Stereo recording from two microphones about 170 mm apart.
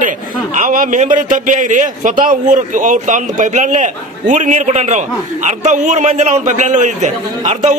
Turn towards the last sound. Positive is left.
turn(degrees=-45)  # may be behind; listen again after turning